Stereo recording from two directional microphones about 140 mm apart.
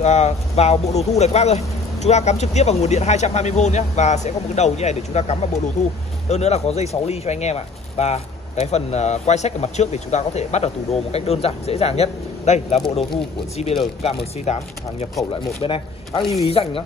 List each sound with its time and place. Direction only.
0.0 s speech: 55° left (ahead or behind)
15.6 s speech: 40° left (ahead or behind)